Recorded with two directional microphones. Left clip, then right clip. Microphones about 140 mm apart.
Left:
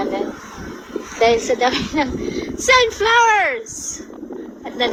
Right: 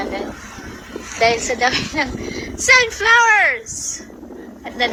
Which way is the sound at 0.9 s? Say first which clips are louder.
Left 1 dB; 45° right (ahead or behind).